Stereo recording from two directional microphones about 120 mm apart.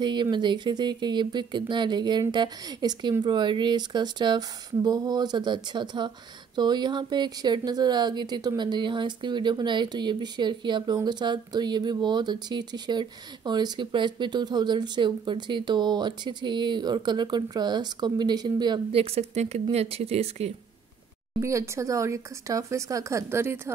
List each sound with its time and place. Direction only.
0.0 s speech: 40° right (ahead or behind)
18.9 s speech: 55° right (ahead or behind)
21.4 s speech: 25° right (ahead or behind)